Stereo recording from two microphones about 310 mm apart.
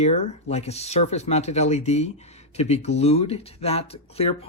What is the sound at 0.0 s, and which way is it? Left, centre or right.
Speech, left.